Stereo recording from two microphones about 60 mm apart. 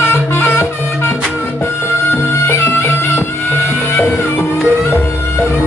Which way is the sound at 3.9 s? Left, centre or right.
Left.